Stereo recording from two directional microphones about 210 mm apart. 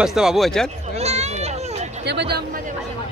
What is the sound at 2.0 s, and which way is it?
Speech, 50° right (ahead or behind).